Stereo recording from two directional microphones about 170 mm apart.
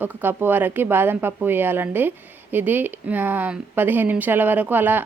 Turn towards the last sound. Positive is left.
turn(degrees=-10)  # may be behind; listen again after turning